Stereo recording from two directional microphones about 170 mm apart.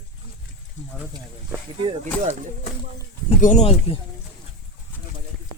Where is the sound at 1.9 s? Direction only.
40° right (ahead or behind).